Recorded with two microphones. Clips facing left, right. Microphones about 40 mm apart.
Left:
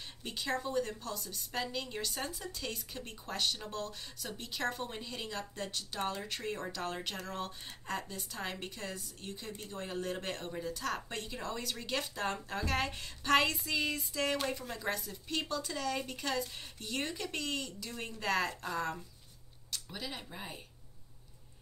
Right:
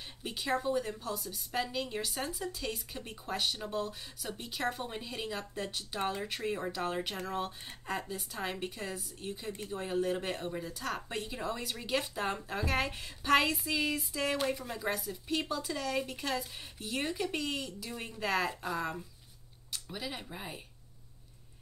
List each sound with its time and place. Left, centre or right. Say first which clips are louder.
0.2 s speech: right 3 dB; centre